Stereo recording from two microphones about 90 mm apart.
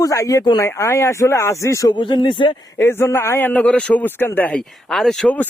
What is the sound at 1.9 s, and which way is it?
Speech, 60° left (ahead or behind).